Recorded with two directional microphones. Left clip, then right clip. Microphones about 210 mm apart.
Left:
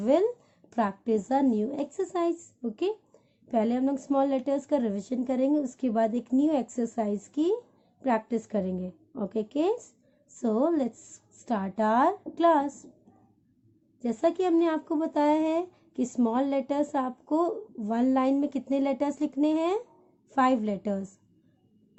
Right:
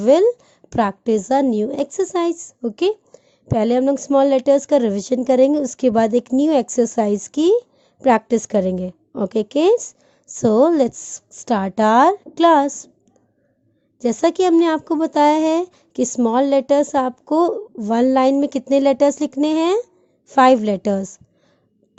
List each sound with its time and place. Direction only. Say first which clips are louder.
0.0 s speech: right 11 dB; 40° right (ahead or behind)
14.0 s speech: right 10 dB; 45° right (ahead or behind)